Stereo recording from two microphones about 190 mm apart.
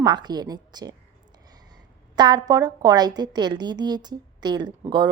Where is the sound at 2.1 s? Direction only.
20° right (ahead or behind).